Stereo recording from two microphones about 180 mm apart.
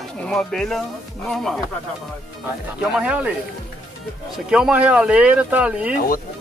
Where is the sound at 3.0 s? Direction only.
5° right (ahead or behind).